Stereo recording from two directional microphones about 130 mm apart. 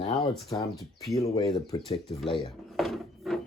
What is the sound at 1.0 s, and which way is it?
Speech, 25° left (ahead or behind).